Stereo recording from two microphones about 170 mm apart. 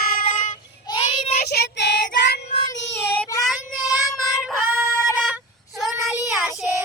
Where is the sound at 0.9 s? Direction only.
25° left (ahead or behind).